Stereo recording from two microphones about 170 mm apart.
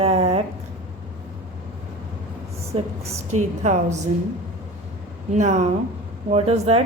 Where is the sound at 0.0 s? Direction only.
35° right (ahead or behind).